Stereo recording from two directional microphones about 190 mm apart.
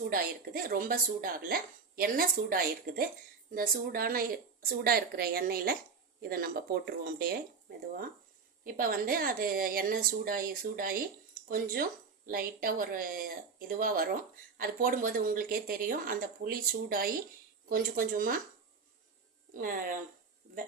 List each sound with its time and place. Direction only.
0.1 s speech: 50° right (ahead or behind)
8.6 s speech: 50° right (ahead or behind)
19.5 s speech: 45° right (ahead or behind)